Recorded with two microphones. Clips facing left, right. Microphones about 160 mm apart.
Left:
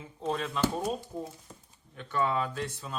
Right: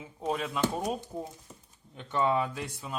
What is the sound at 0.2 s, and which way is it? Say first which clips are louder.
Speech: even; 10° right (ahead or behind).